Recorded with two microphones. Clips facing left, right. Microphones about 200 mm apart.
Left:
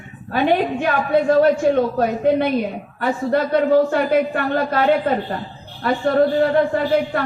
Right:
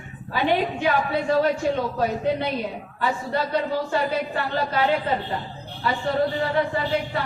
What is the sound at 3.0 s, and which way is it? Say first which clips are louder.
A man's voice: left 6 dB; 50° left (ahead or behind).